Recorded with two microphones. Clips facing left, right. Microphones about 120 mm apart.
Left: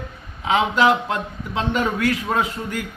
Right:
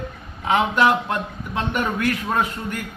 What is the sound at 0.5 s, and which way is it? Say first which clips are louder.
A man's voice: left 1 dB; 20° left (ahead or behind).